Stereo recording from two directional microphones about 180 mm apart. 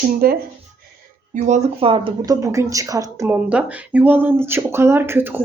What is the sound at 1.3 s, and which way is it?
Speech, 40° right (ahead or behind).